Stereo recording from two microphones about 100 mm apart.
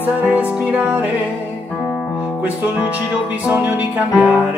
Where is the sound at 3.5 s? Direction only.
15° right (ahead or behind).